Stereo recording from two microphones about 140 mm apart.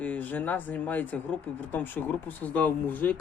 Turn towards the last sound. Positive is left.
turn(degrees=15)  # may be behind; listen again after turning